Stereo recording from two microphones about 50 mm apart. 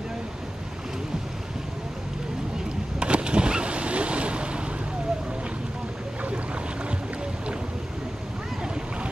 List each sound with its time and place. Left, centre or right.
3.0 s boat: centre